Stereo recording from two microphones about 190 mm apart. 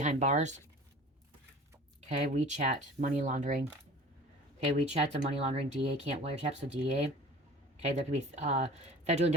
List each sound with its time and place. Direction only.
0.0 s speech: 40° right (ahead or behind)
2.0 s speech: 35° right (ahead or behind)
4.9 s speech: 30° right (ahead or behind)